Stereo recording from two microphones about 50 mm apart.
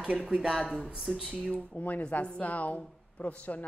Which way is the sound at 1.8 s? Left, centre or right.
Left.